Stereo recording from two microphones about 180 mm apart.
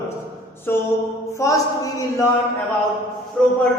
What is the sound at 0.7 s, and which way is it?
A man's voice, 15° left (ahead or behind).